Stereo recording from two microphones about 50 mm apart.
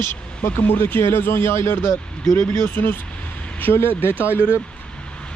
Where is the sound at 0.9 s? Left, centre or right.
Left.